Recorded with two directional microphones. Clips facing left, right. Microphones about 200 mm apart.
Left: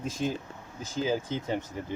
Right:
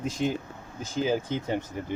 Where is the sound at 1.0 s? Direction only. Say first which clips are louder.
Right 2 dB; 15° right (ahead or behind).